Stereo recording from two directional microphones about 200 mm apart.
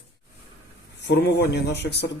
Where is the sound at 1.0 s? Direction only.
55° left (ahead or behind).